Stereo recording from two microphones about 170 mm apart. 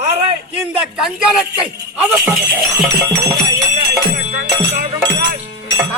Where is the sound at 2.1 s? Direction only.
10° right (ahead or behind).